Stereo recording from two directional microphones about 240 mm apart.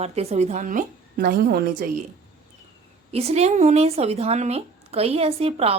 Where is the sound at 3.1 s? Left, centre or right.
Right.